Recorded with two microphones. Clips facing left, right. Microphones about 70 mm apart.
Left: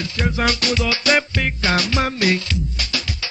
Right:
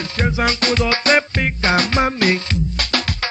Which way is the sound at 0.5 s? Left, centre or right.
Right.